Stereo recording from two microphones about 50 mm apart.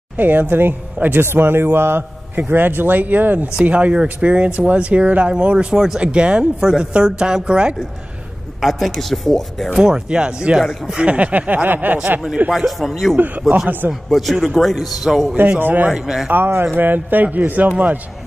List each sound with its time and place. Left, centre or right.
0.2 s a man's voice: right
1.2 s a man's voice: right
3.6 s a woman's voice: right
8.5 s a man's voice: centre
9.7 s a woman's voice: centre; by 12.0 s right
12.4 s a man's voice: centre
15.6 s a man's voice: right
15.9 s a woman's voice: centre
16.7 s a man's voice: right